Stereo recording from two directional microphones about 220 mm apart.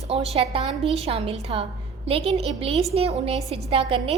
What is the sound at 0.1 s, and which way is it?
A woman's voice, 25° right (ahead or behind).